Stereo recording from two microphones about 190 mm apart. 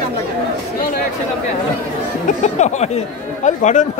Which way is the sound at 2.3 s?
35° left (ahead or behind).